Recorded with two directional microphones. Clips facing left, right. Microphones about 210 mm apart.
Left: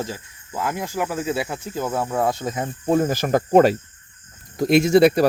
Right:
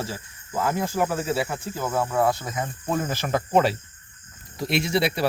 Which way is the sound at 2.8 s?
40° left (ahead or behind).